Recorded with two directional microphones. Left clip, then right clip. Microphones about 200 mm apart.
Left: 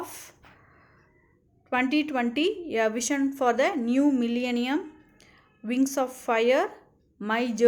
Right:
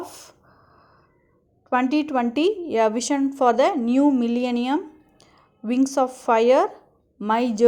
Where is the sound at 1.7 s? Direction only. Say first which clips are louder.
Right 4 dB; 20° right (ahead or behind).